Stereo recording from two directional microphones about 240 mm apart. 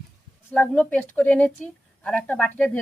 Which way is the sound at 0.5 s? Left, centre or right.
Centre.